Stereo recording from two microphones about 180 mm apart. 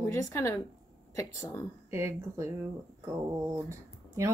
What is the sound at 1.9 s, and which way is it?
Speech, 15° right (ahead or behind).